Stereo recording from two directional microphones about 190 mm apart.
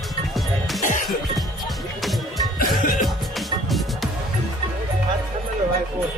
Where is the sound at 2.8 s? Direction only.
45° left (ahead or behind).